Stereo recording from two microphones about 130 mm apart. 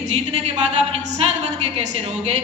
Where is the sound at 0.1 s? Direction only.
55° right (ahead or behind).